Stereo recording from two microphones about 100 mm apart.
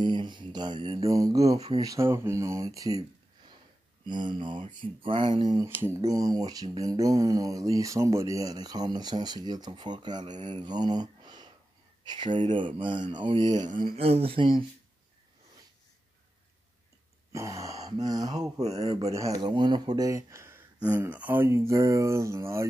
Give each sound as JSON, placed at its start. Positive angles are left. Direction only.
{"t": 0.0, "sound": "mantra", "side_deg": -50}
{"t": 1.0, "sound": "speech", "side_deg": -35}
{"t": 4.0, "sound": "mantra", "side_deg": -50}
{"t": 5.7, "sound": "speech", "side_deg": -20}
{"t": 5.9, "sound": "speech", "side_deg": -35}
{"t": 12.1, "sound": "mantra", "side_deg": -55}
{"t": 13.9, "sound": "speech", "side_deg": -80}
{"t": 17.3, "sound": "speech", "side_deg": -30}
{"t": 18.6, "sound": "speech", "side_deg": -90}
{"t": 19.1, "sound": "speech", "side_deg": -35}
{"t": 21.1, "sound": "speech", "side_deg": -15}